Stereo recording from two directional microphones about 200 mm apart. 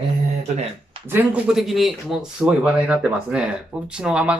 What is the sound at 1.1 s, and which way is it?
Speech, 10° right (ahead or behind).